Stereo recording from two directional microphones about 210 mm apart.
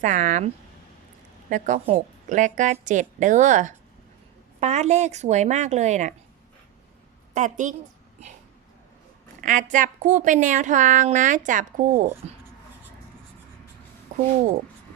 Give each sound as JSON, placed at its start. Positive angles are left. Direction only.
{"t": 0.0, "sound": "a woman's voice", "side_deg": -35}
{"t": 7.3, "sound": "a woman's voice", "side_deg": -35}
{"t": 9.4, "sound": "a woman's voice", "side_deg": -35}
{"t": 12.2, "sound": "speech", "side_deg": -30}